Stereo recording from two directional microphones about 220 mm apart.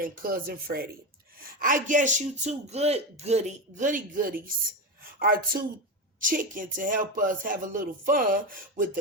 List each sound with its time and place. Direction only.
0.0 s a man's voice: 40° right (ahead or behind)